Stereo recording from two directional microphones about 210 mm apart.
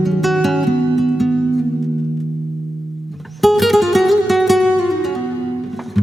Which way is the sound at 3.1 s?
Centre (ahead or behind).